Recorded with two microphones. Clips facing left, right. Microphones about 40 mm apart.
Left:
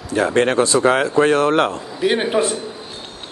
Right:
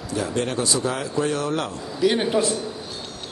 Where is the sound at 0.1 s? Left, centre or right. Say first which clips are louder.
Left 9 dB; left.